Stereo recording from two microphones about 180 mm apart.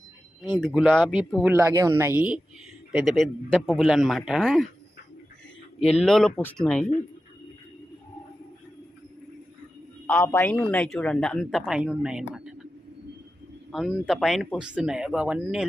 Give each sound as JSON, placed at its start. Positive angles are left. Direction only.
{"t": 0.6, "sound": "a woman's voice", "side_deg": 0}
{"t": 1.5, "sound": "a woman's voice", "side_deg": -15}
{"t": 6.0, "sound": "a woman's voice", "side_deg": 0}
{"t": 10.1, "sound": "a woman's voice", "side_deg": 10}
{"t": 13.7, "sound": "a woman's voice", "side_deg": 0}